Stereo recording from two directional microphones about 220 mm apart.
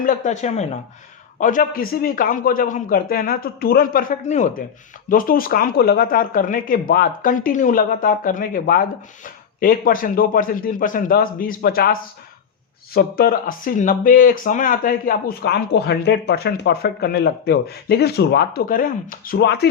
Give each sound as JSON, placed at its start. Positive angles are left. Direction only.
{"t": 0.0, "sound": "speech", "side_deg": 35}